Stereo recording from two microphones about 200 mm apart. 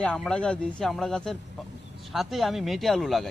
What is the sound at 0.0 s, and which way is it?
Speech, 5° left (ahead or behind).